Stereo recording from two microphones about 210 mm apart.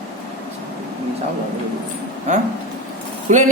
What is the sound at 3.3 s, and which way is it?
Speech, 35° right (ahead or behind).